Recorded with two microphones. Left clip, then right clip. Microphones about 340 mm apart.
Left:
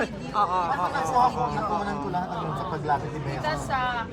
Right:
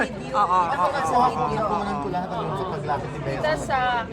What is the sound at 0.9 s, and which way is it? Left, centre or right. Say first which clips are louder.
Speech: left 1 dB; left.